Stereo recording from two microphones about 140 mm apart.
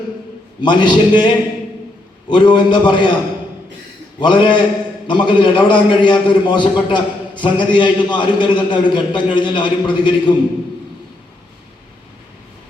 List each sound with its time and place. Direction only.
0.6 s a man's voice: 35° left (ahead or behind)
2.3 s a man's voice: 35° left (ahead or behind)
4.2 s a man's voice: 35° left (ahead or behind)